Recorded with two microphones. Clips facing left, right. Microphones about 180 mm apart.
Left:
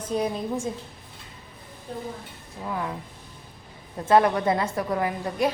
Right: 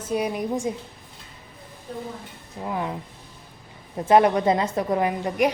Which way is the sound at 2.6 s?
20° right (ahead or behind).